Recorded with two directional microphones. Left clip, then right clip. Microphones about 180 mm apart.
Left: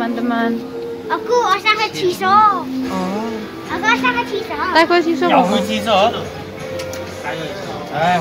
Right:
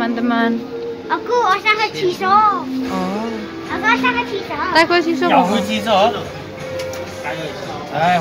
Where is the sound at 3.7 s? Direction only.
15° right (ahead or behind).